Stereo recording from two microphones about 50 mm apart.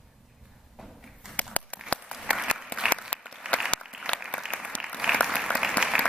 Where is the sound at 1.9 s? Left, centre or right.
Left.